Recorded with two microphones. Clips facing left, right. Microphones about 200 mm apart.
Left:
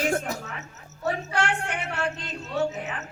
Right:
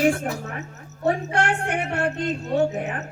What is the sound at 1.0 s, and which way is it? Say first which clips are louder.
Speech: right 5 dB; 55° right (ahead or behind).